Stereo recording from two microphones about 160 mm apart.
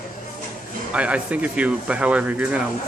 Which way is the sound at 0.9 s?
5° right (ahead or behind).